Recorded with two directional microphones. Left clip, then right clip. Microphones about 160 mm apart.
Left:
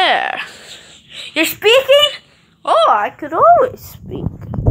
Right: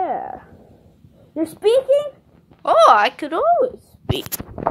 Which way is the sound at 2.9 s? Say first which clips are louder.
Even; 10° right (ahead or behind).